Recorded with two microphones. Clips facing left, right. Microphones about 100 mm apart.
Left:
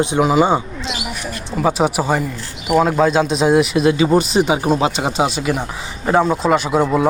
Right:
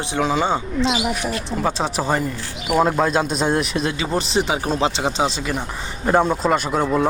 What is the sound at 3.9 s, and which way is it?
Speech, 20° left (ahead or behind).